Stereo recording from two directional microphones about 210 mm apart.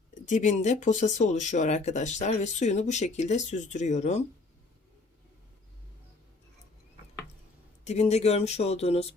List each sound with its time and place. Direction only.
0.1 s speech: 35° left (ahead or behind)
7.9 s speech: 30° left (ahead or behind)